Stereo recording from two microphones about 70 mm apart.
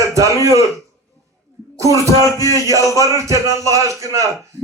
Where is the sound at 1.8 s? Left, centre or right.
Left.